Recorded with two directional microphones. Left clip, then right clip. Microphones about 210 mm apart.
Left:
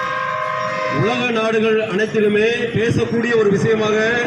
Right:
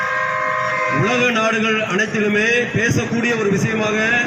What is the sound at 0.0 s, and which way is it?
Vehicle, 55° left (ahead or behind).